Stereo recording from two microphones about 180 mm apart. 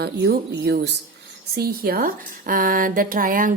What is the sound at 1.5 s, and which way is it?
Speech, 60° right (ahead or behind).